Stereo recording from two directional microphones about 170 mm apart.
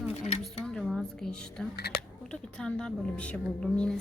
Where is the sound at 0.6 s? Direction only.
Centre (ahead or behind).